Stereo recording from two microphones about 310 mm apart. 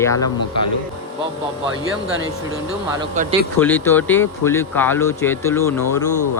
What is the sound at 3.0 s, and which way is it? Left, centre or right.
Speech, centre.